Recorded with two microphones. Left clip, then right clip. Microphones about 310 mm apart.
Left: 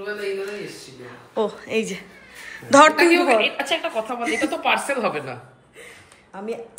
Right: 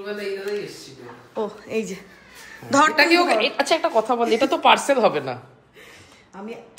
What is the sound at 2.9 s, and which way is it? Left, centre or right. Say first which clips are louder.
Speech: even; right.